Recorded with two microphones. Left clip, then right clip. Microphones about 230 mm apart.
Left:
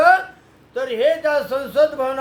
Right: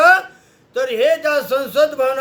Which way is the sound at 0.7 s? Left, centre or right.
Centre.